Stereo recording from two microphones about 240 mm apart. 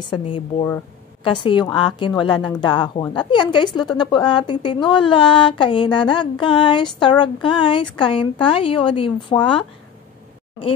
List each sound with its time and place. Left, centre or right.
0.0 s a woman's voice: left